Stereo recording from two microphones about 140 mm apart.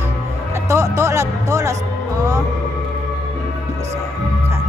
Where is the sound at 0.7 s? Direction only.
20° right (ahead or behind).